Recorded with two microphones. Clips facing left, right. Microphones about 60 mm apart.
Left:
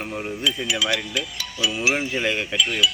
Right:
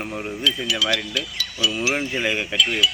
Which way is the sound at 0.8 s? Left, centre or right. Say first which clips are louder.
Right 1 dB; centre.